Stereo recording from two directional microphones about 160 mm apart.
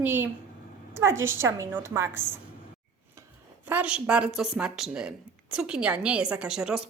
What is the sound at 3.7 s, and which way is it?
A woman's voice, 5° right (ahead or behind).